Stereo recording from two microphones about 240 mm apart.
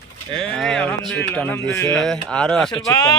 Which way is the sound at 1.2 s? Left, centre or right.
Centre.